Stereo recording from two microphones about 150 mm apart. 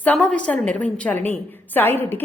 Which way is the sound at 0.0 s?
10° left (ahead or behind).